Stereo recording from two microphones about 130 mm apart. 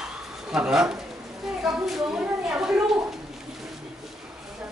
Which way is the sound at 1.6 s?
5° right (ahead or behind).